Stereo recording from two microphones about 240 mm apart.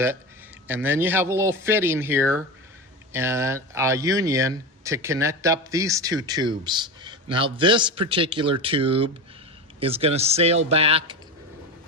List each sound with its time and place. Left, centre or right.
0.7 s speech: centre; by 11.2 s right